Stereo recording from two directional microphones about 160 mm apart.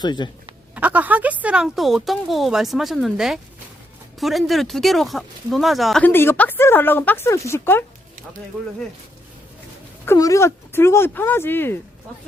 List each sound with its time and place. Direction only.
0.0 s speech: 30° left (ahead or behind)
0.8 s speech: 10° right (ahead or behind)
6.1 s speech: 15° left (ahead or behind)
10.1 s speech: 20° left (ahead or behind)